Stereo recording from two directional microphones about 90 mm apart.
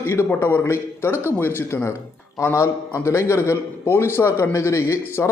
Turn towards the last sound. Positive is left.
turn(degrees=30)  # may be behind; listen again after turning